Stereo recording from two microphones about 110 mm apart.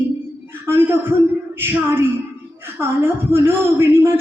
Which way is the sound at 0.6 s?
20° right (ahead or behind).